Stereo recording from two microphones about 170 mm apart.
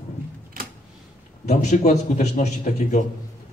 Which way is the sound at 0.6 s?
60° right (ahead or behind).